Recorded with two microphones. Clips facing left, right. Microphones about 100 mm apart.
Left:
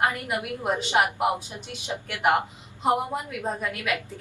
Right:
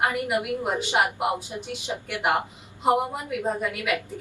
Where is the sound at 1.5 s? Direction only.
15° right (ahead or behind).